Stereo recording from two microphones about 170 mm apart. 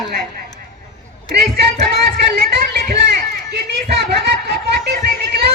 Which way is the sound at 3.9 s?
75° right (ahead or behind).